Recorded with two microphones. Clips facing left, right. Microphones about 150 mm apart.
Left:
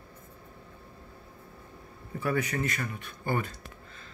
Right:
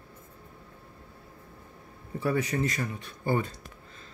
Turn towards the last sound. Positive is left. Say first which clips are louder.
# right 3 dB
turn(degrees=-30)  # may be behind; listen again after turning